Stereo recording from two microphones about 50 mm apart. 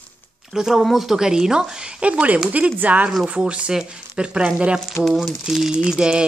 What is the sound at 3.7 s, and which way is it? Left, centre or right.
Speech, centre.